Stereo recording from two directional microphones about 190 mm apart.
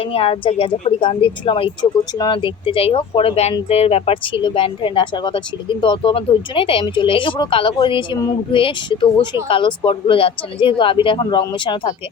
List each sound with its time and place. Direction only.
0.0 s a woman's voice: 30° left (ahead or behind)